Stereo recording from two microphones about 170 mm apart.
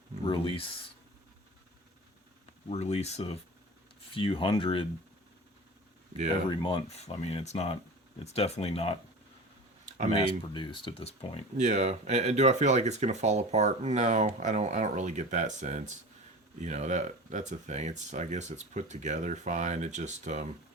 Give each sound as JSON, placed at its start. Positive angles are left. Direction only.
{"t": 0.3, "sound": "speech", "side_deg": 30}
{"t": 2.6, "sound": "speech", "side_deg": 40}
{"t": 6.5, "sound": "speech", "side_deg": 30}
{"t": 10.2, "sound": "speech", "side_deg": 30}
{"t": 11.5, "sound": "speech", "side_deg": -45}